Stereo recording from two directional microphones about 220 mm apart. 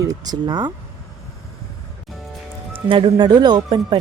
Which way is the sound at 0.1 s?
15° right (ahead or behind).